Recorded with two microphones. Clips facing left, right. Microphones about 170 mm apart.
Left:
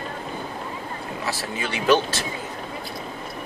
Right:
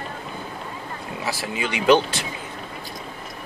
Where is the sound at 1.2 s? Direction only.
15° right (ahead or behind).